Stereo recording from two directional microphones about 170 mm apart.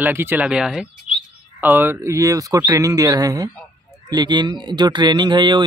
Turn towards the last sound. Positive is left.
turn(degrees=-25)  # may be behind; listen again after turning